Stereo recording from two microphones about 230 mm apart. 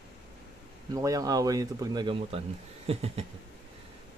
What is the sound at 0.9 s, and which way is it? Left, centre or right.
Speech, centre.